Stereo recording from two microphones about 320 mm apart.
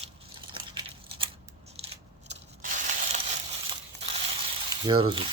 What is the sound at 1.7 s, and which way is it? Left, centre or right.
Scissors, centre.